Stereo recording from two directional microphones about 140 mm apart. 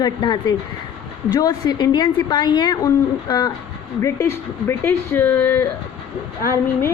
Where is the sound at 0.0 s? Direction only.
30° left (ahead or behind).